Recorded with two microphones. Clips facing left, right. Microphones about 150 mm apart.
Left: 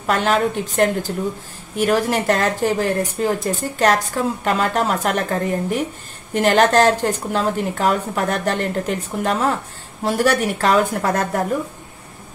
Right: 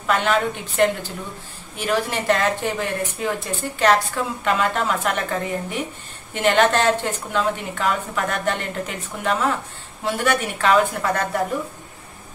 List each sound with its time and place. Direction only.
0.0 s a woman's voice: 40° left (ahead or behind)